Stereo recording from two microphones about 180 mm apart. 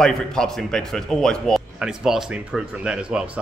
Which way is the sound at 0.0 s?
5° left (ahead or behind).